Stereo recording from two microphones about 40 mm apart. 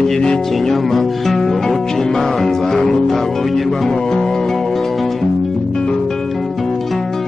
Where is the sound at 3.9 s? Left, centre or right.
Centre.